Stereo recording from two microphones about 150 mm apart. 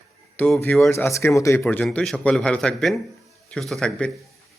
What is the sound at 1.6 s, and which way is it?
A man's voice, 10° left (ahead or behind).